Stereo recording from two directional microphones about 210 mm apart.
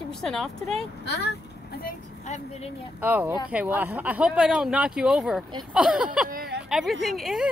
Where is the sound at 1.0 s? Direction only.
50° left (ahead or behind).